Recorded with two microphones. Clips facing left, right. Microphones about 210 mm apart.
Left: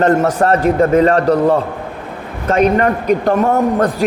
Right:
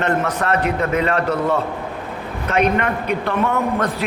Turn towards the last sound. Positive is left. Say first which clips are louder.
# left 6 dB
turn(degrees=40)  # may be behind; listen again after turning